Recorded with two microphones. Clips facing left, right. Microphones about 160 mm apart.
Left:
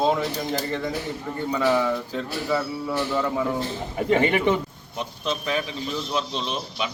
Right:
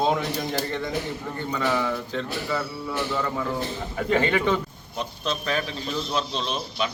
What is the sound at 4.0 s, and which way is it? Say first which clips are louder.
A man's voice: left 2 dB; 20° left (ahead or behind).